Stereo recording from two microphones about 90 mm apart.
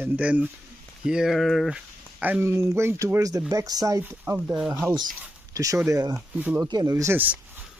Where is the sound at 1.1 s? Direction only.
5° right (ahead or behind).